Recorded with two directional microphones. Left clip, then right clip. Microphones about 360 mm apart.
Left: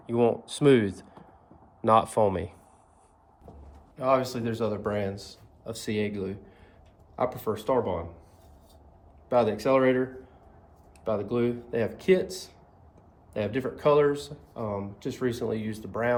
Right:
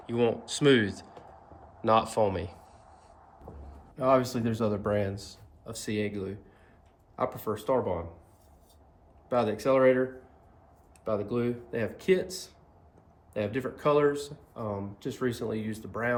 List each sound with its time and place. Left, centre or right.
0.0 s speech: centre
3.9 s speech: centre
9.3 s speech: centre